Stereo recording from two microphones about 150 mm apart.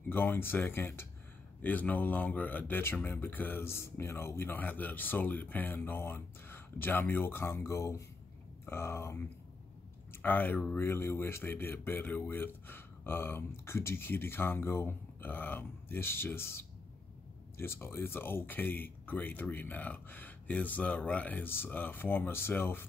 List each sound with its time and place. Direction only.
0.1 s speech: 15° left (ahead or behind)
10.2 s speech: 10° left (ahead or behind)